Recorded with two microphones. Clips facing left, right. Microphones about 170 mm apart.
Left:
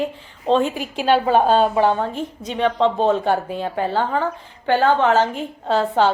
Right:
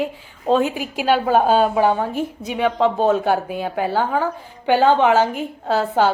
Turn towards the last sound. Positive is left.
turn(degrees=-5)  # may be behind; listen again after turning